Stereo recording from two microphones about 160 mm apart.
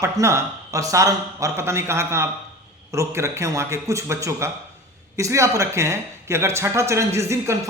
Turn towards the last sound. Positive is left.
turn(degrees=-15)  # may be behind; listen again after turning